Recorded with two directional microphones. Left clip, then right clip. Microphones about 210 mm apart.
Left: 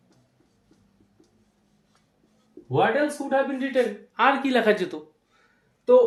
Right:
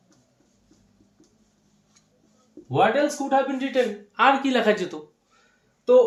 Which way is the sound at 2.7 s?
5° left (ahead or behind).